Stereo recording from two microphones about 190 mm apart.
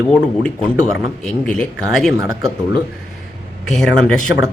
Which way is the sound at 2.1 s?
15° right (ahead or behind).